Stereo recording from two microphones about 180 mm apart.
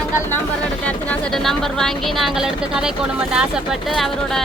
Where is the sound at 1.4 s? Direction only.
Centre (ahead or behind).